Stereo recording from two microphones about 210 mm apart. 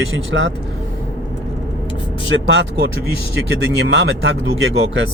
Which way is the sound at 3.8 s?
55° right (ahead or behind).